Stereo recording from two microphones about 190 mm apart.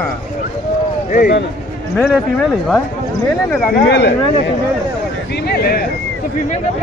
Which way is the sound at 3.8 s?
65° left (ahead or behind).